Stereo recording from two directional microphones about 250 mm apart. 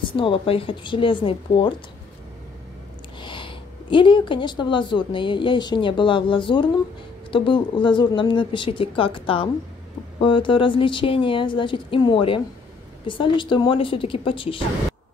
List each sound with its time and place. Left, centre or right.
0.0 s speech: left
3.2 s speech: centre